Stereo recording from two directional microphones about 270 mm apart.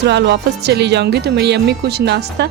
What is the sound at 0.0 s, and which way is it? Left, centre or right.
Speech, right.